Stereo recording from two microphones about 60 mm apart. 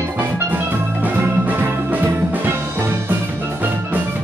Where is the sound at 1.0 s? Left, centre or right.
Right.